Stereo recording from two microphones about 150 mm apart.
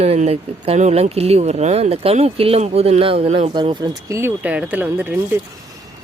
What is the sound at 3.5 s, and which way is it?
Speech, 30° right (ahead or behind).